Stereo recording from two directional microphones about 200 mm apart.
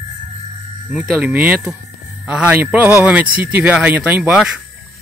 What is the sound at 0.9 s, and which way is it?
A man's voice, 5° right (ahead or behind).